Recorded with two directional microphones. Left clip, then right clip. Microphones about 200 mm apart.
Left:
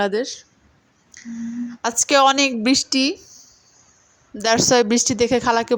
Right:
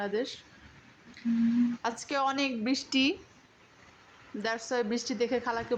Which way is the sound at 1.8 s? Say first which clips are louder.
Left 15 dB; 40° left (ahead or behind).